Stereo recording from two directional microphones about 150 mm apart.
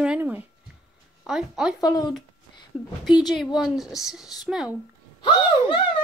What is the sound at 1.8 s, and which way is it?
Speech, 25° left (ahead or behind).